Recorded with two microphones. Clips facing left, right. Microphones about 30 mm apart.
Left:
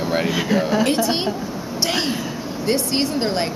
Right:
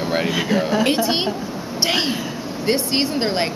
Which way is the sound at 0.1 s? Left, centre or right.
Centre.